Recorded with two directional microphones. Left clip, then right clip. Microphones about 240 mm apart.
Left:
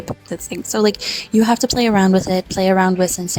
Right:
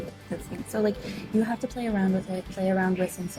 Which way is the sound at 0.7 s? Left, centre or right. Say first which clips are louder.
Left 10 dB; left.